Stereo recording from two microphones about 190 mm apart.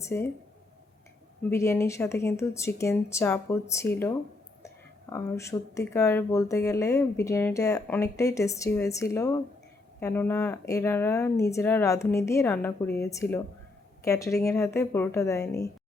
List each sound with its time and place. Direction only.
0.0 s speech: 15° left (ahead or behind)
1.5 s speech: 15° left (ahead or behind)